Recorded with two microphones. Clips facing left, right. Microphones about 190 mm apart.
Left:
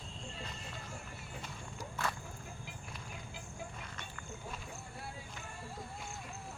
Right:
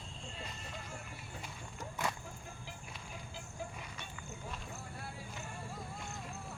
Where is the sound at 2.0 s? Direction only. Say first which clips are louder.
Right 1 dB; 15° right (ahead or behind).